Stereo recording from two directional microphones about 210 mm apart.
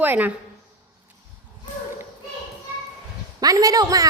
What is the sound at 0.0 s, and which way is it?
Speech, 10° right (ahead or behind).